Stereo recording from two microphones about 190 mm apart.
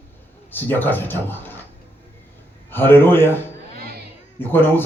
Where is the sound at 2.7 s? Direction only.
10° left (ahead or behind).